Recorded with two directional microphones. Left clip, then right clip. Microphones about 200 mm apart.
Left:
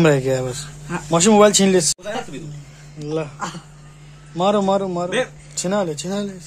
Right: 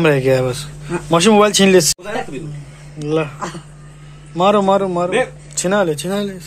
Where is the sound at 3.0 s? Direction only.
5° left (ahead or behind).